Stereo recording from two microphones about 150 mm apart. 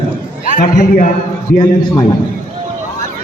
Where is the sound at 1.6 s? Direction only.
20° left (ahead or behind).